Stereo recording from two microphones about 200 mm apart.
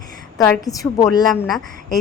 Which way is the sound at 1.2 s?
Centre (ahead or behind).